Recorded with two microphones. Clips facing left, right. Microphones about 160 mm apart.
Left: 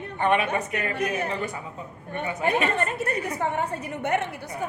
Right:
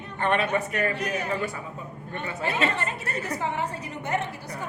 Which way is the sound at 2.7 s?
50° left (ahead or behind).